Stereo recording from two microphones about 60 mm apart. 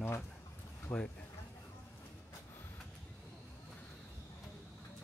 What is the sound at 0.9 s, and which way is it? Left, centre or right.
Speech, left.